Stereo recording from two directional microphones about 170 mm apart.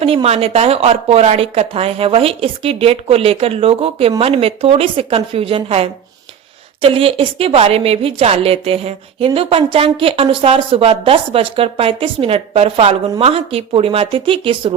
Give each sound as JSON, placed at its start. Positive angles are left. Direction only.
{"t": 0.0, "sound": "a woman's voice", "side_deg": -35}